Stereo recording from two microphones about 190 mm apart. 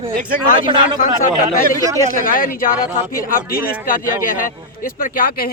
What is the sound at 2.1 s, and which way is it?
A man's voice, 45° left (ahead or behind).